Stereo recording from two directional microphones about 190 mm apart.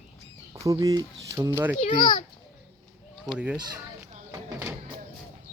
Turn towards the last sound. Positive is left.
turn(degrees=-15)  # may be behind; listen again after turning